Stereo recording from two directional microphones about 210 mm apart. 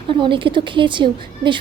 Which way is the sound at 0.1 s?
25° right (ahead or behind).